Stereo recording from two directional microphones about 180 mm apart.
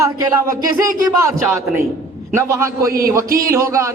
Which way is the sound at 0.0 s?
20° right (ahead or behind).